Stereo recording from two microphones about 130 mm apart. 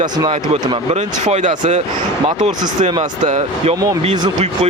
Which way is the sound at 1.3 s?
65° right (ahead or behind).